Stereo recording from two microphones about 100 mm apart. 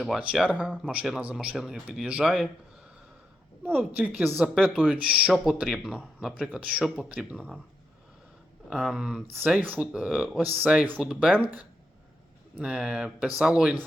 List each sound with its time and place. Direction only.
0.3 s speech: 10° right (ahead or behind)
3.7 s speech: 15° right (ahead or behind)
5.3 s speech: centre (ahead or behind)
8.7 s speech: 5° right (ahead or behind)
10.4 s speech: 10° right (ahead or behind)
12.5 s speech: 10° right (ahead or behind)